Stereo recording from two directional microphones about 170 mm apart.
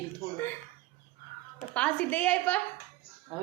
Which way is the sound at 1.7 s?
10° left (ahead or behind).